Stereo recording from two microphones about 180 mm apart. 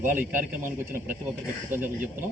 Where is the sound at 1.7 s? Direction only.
10° right (ahead or behind).